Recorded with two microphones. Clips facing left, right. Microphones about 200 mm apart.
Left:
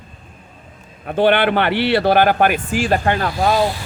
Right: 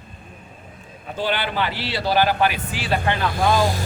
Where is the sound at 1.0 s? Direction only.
60° left (ahead or behind).